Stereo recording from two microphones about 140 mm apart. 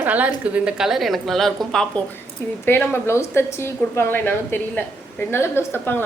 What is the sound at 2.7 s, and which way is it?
A woman's voice, 15° left (ahead or behind).